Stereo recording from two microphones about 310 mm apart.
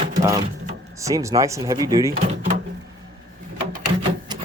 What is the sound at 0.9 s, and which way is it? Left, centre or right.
Speech, centre.